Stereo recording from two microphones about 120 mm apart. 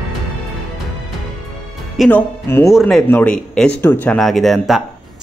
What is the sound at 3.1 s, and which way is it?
Speech, 15° left (ahead or behind).